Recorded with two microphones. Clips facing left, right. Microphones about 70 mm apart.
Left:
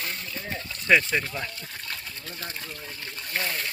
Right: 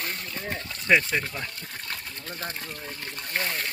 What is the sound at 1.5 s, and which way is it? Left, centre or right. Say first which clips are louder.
Speech: right 1 dB; right.